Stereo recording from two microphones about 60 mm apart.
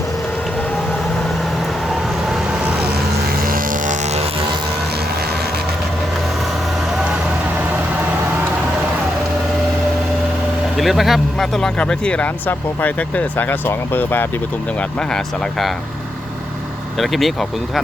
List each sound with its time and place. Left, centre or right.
10.8 s speech: centre
11.8 s speech: centre; by 14.3 s left
17.0 s speech: centre